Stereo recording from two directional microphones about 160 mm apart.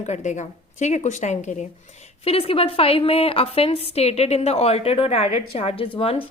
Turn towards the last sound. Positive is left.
turn(degrees=35)  # may be behind; listen again after turning